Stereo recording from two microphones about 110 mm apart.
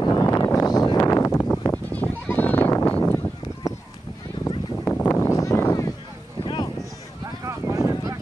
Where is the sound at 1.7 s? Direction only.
15° left (ahead or behind).